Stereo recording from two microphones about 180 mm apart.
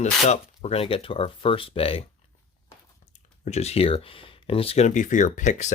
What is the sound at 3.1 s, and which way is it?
Speech, 40° left (ahead or behind).